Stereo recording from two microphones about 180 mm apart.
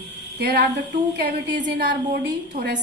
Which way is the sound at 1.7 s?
65° right (ahead or behind).